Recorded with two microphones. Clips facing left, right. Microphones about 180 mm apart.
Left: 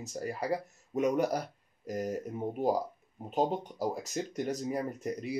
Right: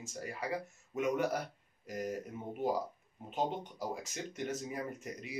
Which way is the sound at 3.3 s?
40° left (ahead or behind).